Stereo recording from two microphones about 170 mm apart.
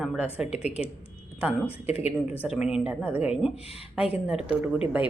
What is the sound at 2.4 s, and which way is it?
A woman's voice, 5° right (ahead or behind).